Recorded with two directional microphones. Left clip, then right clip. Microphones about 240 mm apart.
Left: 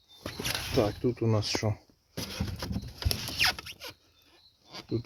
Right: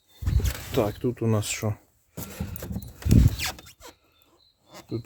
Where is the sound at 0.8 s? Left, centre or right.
Right.